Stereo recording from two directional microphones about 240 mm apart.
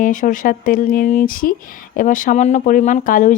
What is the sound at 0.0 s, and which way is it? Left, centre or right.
Speech, left.